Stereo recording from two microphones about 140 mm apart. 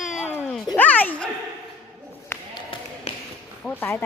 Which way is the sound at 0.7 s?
10° left (ahead or behind).